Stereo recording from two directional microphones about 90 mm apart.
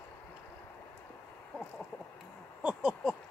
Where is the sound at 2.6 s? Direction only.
10° right (ahead or behind).